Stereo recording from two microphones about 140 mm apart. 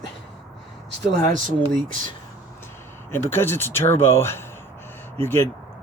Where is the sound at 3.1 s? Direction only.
15° left (ahead or behind).